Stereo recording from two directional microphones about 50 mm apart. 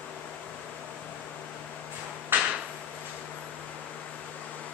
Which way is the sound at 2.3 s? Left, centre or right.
Right.